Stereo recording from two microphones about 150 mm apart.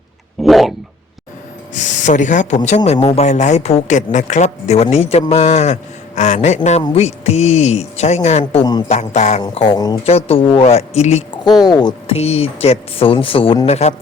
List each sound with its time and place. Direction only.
0.4 s a sound: centre (ahead or behind)
1.7 s speech: 55° left (ahead or behind)
9.7 s speech: 25° left (ahead or behind)
10.0 s speech: 45° left (ahead or behind)
11.6 s speech: 30° left (ahead or behind)
12.1 s speech: 45° left (ahead or behind)